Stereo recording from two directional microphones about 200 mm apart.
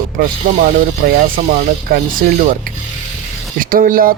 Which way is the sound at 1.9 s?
45° right (ahead or behind).